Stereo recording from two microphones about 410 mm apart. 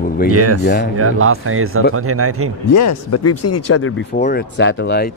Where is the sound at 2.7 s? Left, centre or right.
Left.